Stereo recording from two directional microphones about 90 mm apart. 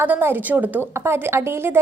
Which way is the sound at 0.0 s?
25° right (ahead or behind).